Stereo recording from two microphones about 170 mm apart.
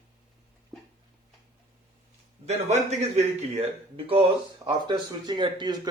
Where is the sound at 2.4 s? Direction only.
40° right (ahead or behind).